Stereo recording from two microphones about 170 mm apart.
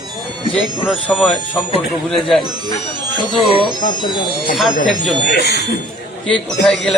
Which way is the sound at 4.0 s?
25° left (ahead or behind).